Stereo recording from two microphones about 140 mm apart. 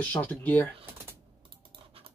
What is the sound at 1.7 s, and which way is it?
Scratch, 40° right (ahead or behind).